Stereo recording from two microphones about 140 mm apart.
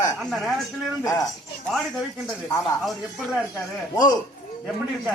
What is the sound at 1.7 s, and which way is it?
Speech, centre (ahead or behind).